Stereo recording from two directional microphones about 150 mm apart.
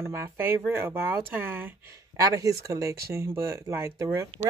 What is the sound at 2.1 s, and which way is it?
Speech, 25° right (ahead or behind).